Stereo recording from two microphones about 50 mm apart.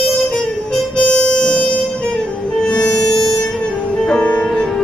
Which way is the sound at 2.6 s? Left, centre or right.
Centre.